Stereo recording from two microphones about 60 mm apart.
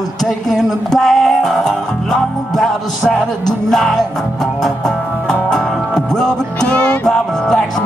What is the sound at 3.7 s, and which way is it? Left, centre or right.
Music, centre.